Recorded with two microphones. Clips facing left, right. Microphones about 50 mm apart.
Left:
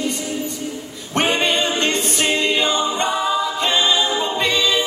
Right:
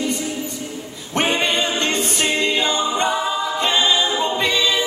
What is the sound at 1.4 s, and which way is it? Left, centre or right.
A capella, centre.